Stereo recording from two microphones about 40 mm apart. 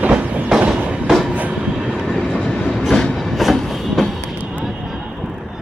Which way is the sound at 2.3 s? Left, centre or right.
Left.